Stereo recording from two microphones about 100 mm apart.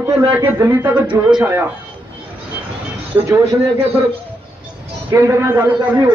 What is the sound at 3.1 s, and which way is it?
Speech, 30° right (ahead or behind).